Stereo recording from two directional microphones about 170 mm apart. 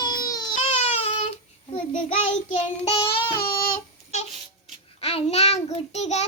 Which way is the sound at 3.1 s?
65° left (ahead or behind).